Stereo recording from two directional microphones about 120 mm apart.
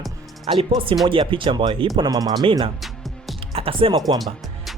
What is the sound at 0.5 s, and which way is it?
Speech, 55° right (ahead or behind).